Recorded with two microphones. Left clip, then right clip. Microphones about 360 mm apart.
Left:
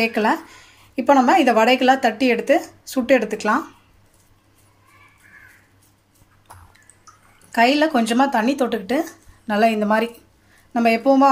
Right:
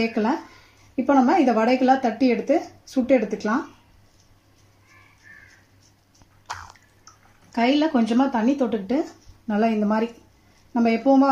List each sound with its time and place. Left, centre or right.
0.0 s speech: left
7.5 s speech: left